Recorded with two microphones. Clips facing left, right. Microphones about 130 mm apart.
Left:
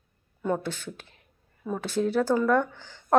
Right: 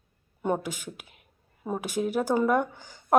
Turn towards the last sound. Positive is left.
turn(degrees=-10)  # may be behind; listen again after turning